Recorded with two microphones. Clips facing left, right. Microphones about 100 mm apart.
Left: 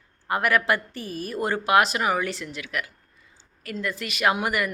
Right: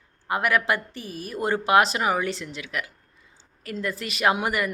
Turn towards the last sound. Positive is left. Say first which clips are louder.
# even
turn(degrees=-25)  # may be behind; listen again after turning